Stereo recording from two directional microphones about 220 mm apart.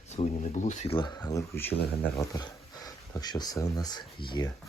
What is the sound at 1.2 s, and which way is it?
Speech, 10° left (ahead or behind).